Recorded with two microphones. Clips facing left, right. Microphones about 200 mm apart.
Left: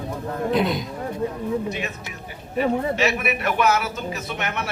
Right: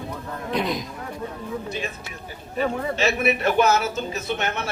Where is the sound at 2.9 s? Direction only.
25° right (ahead or behind).